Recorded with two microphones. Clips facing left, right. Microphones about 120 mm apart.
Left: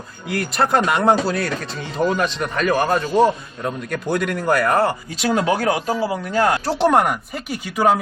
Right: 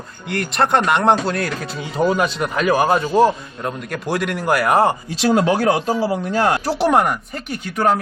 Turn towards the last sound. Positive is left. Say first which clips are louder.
# left 1 dB
turn(degrees=5)  # may be behind; listen again after turning